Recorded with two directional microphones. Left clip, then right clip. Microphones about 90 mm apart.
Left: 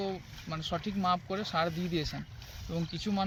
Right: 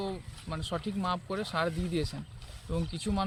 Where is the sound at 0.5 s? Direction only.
40° right (ahead or behind).